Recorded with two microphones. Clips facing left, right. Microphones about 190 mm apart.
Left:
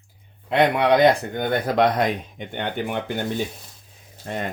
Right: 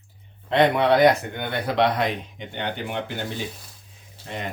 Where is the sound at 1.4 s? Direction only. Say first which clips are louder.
Left 4 dB; 45° left (ahead or behind).